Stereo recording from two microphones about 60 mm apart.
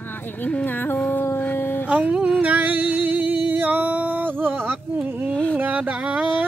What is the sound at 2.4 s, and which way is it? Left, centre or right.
Music, right.